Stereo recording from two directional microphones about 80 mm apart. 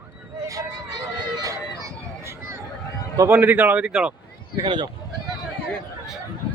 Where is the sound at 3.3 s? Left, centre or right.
Right.